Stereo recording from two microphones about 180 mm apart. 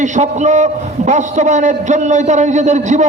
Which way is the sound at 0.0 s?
40° right (ahead or behind).